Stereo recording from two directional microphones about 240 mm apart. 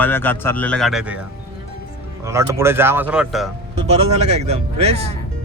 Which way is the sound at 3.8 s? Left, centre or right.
Right.